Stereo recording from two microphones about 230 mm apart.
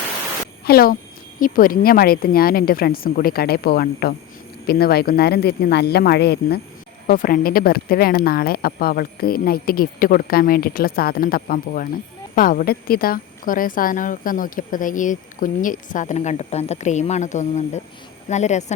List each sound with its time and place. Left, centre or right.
0.6 s speech: left